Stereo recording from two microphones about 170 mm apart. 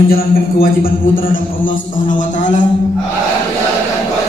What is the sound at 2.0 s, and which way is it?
Speech, 50° left (ahead or behind).